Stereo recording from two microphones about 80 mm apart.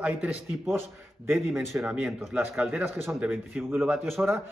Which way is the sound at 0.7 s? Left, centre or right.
Right.